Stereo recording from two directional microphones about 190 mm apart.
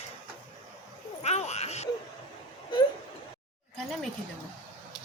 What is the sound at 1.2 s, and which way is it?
Speech, 35° left (ahead or behind).